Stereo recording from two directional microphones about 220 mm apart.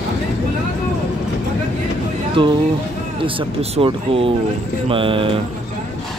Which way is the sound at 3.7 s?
25° right (ahead or behind).